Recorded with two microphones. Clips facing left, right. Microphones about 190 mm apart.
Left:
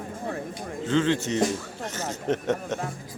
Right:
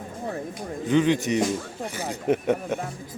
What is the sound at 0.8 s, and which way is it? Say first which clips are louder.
Speech: right 3 dB; 15° right (ahead or behind).